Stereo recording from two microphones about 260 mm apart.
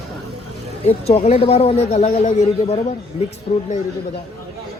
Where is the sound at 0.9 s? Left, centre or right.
Left.